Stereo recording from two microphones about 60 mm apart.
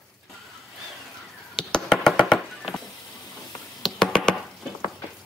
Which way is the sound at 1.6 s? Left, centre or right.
Centre.